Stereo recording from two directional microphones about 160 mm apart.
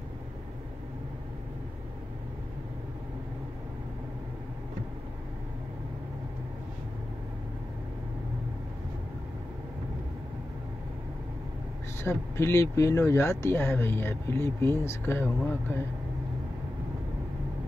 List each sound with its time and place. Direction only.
12.0 s speech: 15° left (ahead or behind)